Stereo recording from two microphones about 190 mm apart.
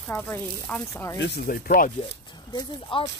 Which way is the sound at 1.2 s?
55° left (ahead or behind).